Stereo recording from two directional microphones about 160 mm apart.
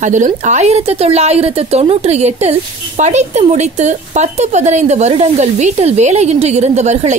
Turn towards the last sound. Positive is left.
turn(degrees=-45)  # may be behind; listen again after turning